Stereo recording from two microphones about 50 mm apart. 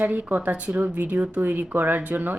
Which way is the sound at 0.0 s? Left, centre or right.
Right.